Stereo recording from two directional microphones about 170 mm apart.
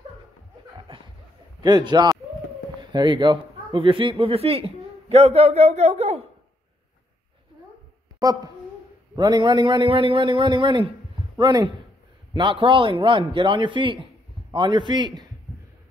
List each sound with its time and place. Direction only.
0.7 s chuckle: 30° right (ahead or behind)
1.6 s a man's voice: 25° right (ahead or behind)
8.2 s a man's voice: 25° right (ahead or behind)